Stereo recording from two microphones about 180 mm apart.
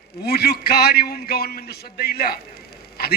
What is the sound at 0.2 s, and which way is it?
A man's voice, 60° left (ahead or behind).